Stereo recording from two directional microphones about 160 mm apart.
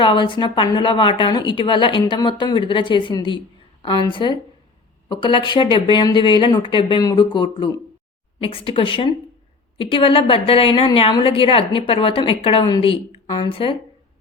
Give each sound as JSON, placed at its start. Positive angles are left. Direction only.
{"t": 0.0, "sound": "a woman's voice", "side_deg": 30}